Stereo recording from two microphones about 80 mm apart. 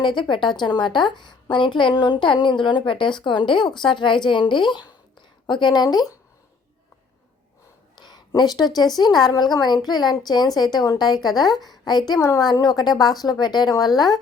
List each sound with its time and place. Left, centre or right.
0.0 s a woman's voice: left
7.9 s a woman's voice: left